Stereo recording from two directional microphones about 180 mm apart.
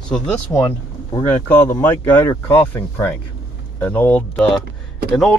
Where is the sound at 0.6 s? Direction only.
15° left (ahead or behind).